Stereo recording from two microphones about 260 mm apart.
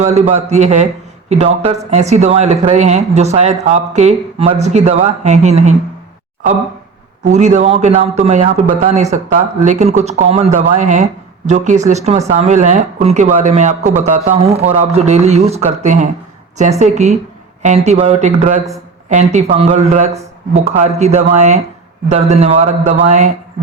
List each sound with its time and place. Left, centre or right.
0.0 s speech: right
7.3 s speech: right